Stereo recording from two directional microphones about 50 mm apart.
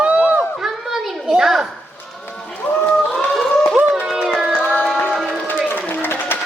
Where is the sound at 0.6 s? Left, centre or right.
Centre.